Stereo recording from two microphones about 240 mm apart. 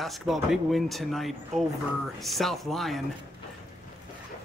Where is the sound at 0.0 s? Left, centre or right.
Centre.